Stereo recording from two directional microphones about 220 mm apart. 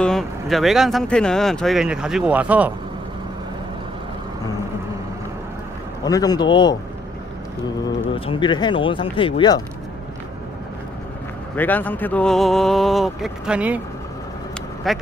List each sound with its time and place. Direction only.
0.0 s speech: centre (ahead or behind)
6.0 s a man's voice: 15° left (ahead or behind)
8.1 s speech: 20° left (ahead or behind)
11.5 s speech: 10° left (ahead or behind)
14.8 s speech: centre (ahead or behind)